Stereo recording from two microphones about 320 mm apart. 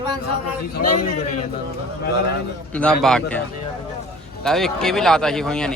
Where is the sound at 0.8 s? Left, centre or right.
Left.